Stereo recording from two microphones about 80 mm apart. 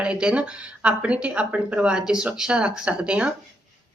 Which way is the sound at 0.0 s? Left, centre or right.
Centre.